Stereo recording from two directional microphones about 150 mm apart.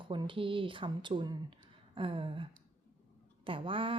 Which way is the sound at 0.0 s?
35° right (ahead or behind).